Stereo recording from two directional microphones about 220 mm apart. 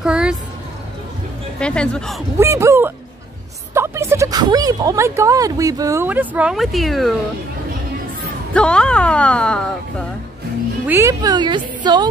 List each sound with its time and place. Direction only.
0.0 s speech: 5° right (ahead or behind)
1.6 s speech: 5° left (ahead or behind)
2.3 s speech: 15° right (ahead or behind)
8.5 s speech: 5° left (ahead or behind)
10.9 s a woman's voice: 15° right (ahead or behind)